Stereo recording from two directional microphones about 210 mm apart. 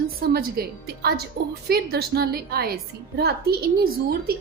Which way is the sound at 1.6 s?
45° right (ahead or behind).